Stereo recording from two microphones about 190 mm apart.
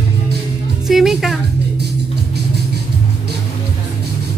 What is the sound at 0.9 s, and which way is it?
Music, centre (ahead or behind).